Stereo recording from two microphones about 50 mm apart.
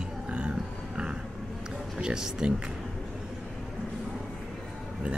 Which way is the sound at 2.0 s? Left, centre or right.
Centre.